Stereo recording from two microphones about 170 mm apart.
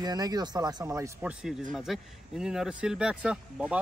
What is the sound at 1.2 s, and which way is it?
Speech, 5° right (ahead or behind).